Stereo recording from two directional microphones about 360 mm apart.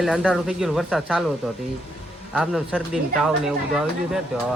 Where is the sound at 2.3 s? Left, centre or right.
Centre.